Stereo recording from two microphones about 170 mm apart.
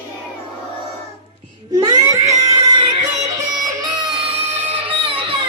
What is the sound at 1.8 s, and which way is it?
Music, 20° right (ahead or behind).